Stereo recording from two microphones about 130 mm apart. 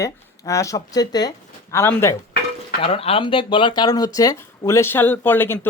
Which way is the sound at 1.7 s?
20° left (ahead or behind).